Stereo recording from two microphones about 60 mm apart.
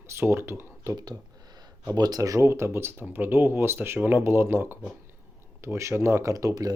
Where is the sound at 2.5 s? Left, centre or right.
Right.